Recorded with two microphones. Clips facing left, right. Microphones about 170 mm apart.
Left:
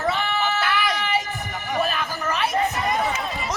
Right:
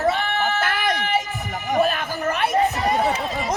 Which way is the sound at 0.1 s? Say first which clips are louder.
Right 2 dB; 50° right (ahead or behind).